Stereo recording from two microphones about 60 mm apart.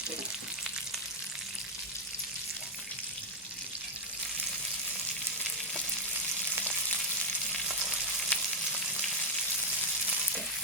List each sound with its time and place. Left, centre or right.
8.3 s frying: left